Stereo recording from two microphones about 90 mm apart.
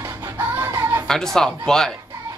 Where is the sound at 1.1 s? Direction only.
5° left (ahead or behind).